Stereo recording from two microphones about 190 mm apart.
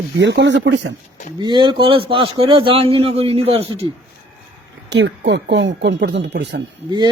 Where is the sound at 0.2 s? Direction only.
70° right (ahead or behind).